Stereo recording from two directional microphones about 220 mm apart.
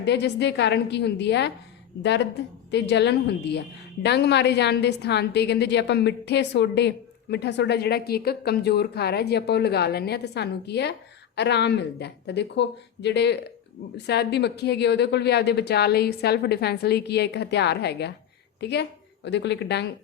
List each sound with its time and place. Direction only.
0.0 s a woman's voice: 50° left (ahead or behind)